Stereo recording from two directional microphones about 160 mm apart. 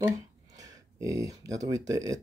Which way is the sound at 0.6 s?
20° right (ahead or behind).